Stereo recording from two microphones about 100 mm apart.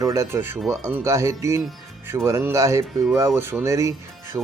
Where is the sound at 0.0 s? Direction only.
30° right (ahead or behind).